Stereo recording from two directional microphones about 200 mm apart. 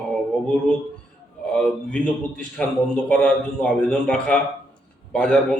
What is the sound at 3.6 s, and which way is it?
A man's voice, 5° left (ahead or behind).